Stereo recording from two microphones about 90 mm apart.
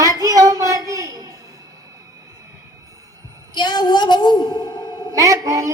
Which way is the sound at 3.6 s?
55° left (ahead or behind).